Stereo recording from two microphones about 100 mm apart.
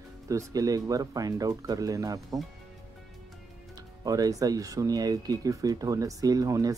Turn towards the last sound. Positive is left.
turn(degrees=-35)  # may be behind; listen again after turning